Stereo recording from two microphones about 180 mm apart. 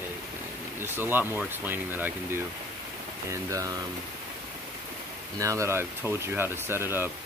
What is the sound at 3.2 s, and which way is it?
Speech, 20° right (ahead or behind).